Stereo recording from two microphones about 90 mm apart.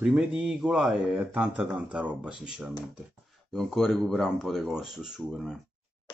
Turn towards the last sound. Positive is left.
turn(degrees=-5)  # may be behind; listen again after turning